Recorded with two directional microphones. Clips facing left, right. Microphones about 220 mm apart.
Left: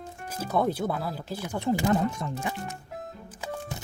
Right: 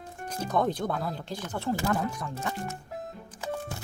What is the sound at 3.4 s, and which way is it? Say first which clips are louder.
Music: right 2 dB; 15° left (ahead or behind).